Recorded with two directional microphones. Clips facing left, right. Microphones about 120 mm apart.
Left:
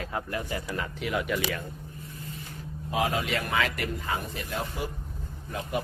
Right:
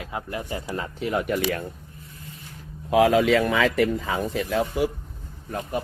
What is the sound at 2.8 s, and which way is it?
Speech, 90° right.